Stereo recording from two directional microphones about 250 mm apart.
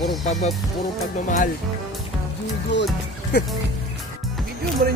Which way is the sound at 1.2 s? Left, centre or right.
Left.